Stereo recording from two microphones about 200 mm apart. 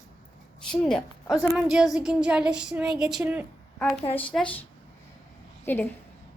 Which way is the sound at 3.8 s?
25° left (ahead or behind).